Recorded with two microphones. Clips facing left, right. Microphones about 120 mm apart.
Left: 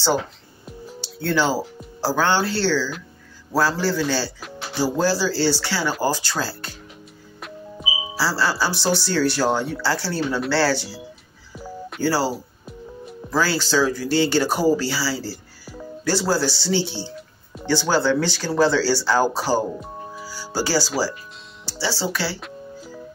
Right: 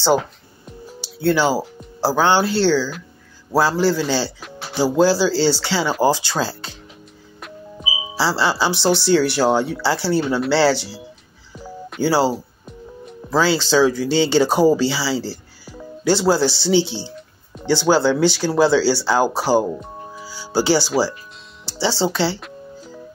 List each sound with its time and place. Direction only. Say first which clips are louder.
1.0 s speech: right 4 dB; 10° right (ahead or behind)
7.3 s music: even; centre (ahead or behind)
8.2 s speech: right 3 dB; 20° right (ahead or behind)
11.5 s telephone dialing: even; centre (ahead or behind)
12.0 s speech: right 4 dB; 15° right (ahead or behind)
13.3 s speech: right 4 dB; 20° right (ahead or behind)
15.2 s music: right 3 dB; centre (ahead or behind)
16.0 s speech: right 5 dB; 20° right (ahead or behind)
20.2 s music: right 7 dB; 15° right (ahead or behind)
21.6 s speech: right 5 dB; 20° right (ahead or behind)